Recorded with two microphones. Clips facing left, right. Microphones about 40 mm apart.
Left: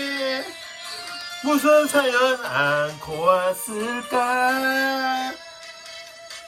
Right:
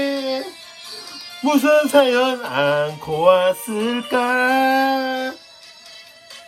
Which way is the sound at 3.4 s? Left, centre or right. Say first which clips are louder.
Right 5 dB; right.